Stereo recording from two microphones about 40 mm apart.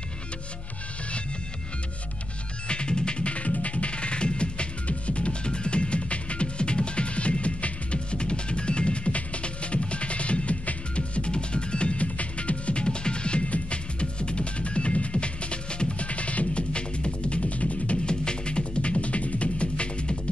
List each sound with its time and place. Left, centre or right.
2.7 s music: left
18.0 s music: left